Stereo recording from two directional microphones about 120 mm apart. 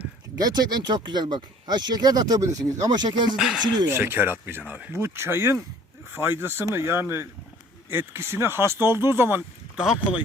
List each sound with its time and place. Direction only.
0.3 s speech: 35° right (ahead or behind)
3.3 s speech: 5° right (ahead or behind)
3.8 s speech: 20° right (ahead or behind)
9.7 s speech: 5° right (ahead or behind)